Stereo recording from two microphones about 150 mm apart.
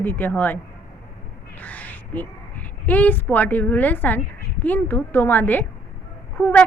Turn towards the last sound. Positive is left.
turn(degrees=10)  # may be behind; listen again after turning